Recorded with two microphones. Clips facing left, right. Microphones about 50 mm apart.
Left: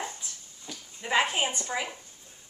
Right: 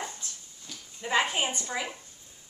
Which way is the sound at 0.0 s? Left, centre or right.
Centre.